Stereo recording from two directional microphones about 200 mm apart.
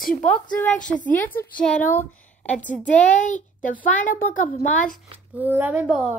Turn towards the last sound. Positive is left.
turn(degrees=-5)  # may be behind; listen again after turning